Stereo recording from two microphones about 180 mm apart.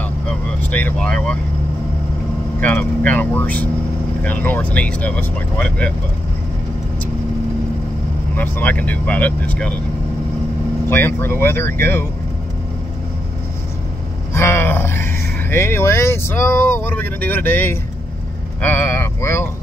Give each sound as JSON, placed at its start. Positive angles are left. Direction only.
{"t": 0.0, "sound": "vehicle", "side_deg": 10}
{"t": 2.6, "sound": "speech", "side_deg": 10}
{"t": 8.4, "sound": "speech", "side_deg": 10}
{"t": 10.9, "sound": "speech", "side_deg": 10}
{"t": 14.3, "sound": "vehicle", "side_deg": 15}
{"t": 15.5, "sound": "speech", "side_deg": 15}